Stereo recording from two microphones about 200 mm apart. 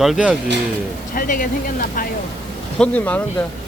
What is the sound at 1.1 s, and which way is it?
Speech, 45° left (ahead or behind).